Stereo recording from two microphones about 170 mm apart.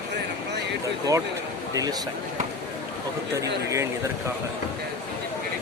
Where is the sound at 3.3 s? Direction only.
15° right (ahead or behind).